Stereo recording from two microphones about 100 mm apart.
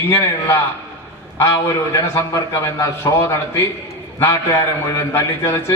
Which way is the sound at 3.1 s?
40° left (ahead or behind).